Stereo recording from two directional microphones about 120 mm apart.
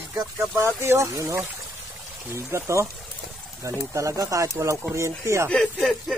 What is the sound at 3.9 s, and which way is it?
Speech, 25° right (ahead or behind).